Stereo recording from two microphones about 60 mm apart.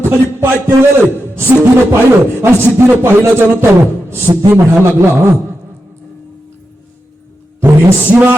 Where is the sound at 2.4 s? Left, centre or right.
Right.